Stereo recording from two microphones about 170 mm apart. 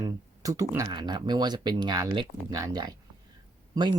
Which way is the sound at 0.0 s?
20° right (ahead or behind).